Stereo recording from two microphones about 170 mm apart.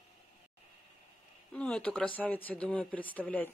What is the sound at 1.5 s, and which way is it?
Speech, 5° left (ahead or behind).